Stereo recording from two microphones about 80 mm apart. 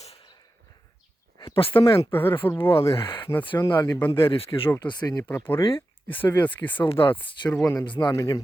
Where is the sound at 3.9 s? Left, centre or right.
Left.